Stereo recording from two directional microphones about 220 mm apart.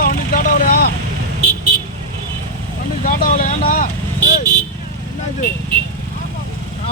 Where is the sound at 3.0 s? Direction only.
40° left (ahead or behind).